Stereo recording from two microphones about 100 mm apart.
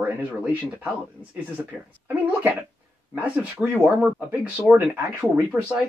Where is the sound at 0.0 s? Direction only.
15° right (ahead or behind).